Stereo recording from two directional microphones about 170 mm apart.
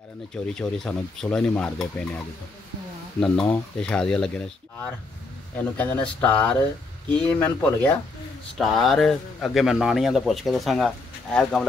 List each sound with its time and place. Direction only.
0.6 s a man's voice: 5° left (ahead or behind)
3.2 s a man's voice: 5° left (ahead or behind)
5.6 s a man's voice: 10° left (ahead or behind)